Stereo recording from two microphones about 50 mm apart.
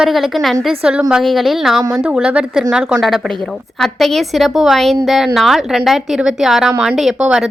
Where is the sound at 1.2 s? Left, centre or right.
Centre.